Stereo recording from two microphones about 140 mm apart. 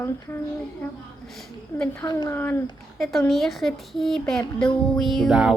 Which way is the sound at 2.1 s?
30° left (ahead or behind).